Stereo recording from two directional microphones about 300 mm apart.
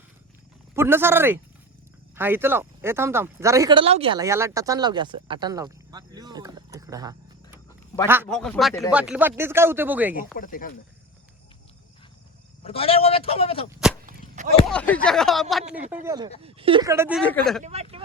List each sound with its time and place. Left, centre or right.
0.8 s speech: centre
10.3 s a man's voice: left
12.6 s a man's voice: centre
14.1 s a sound: right
14.7 s speech: centre
16.0 s speech: centre
17.6 s speech: right